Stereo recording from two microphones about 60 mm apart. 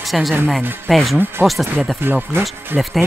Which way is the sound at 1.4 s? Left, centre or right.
Right.